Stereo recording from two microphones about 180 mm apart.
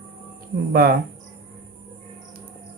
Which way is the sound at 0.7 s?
55° right (ahead or behind).